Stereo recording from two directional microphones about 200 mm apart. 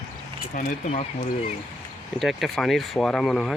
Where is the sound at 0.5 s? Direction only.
35° left (ahead or behind).